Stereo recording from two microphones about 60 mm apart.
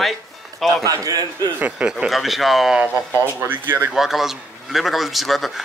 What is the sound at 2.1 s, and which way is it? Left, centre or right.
Speech, centre.